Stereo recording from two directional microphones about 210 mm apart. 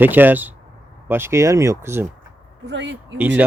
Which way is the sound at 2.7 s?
60° right (ahead or behind).